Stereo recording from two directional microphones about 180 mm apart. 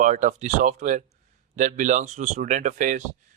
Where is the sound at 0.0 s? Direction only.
45° right (ahead or behind).